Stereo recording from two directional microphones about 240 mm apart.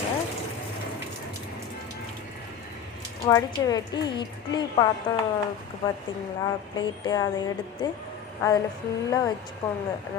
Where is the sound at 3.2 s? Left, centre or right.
Centre.